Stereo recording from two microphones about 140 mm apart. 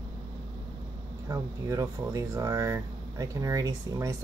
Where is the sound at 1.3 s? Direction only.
20° right (ahead or behind).